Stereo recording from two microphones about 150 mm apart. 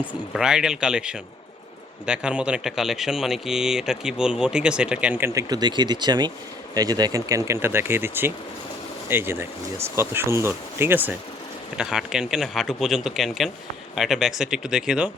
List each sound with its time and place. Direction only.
0.0 s speech: 5° right (ahead or behind)